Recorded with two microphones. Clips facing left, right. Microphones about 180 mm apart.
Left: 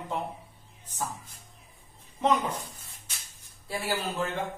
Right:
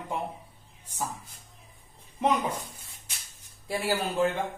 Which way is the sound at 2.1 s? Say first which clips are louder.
Even; 15° right (ahead or behind).